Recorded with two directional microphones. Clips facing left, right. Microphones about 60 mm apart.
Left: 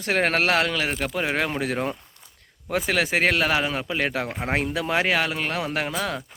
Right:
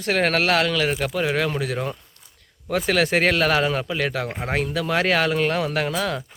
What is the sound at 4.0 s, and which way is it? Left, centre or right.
Speech, left.